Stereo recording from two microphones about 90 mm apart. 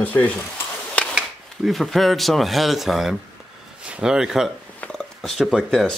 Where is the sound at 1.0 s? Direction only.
15° left (ahead or behind).